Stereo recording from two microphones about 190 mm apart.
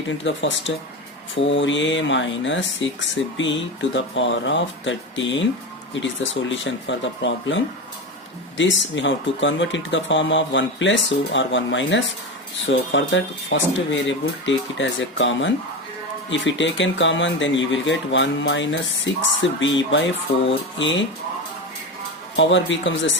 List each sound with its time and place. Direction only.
0.2 s speech: 75° left (ahead or behind)
6.5 s speech: 75° left (ahead or behind)
22.4 s speech: 70° left (ahead or behind)